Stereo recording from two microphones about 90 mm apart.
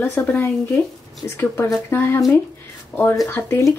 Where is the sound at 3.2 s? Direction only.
25° left (ahead or behind).